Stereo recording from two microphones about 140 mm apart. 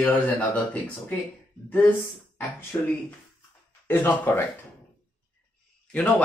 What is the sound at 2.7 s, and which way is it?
Speech, 25° left (ahead or behind).